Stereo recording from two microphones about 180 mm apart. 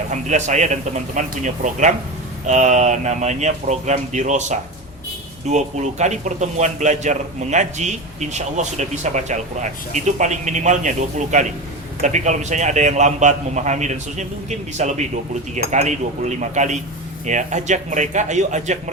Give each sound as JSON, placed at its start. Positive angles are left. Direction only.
{"t": 0.1, "sound": "speech", "side_deg": -40}